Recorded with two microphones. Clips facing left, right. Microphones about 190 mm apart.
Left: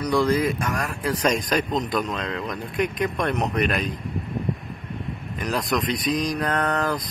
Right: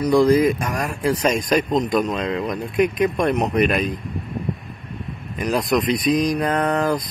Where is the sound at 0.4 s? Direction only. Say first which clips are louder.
Right 5 dB; 10° right (ahead or behind).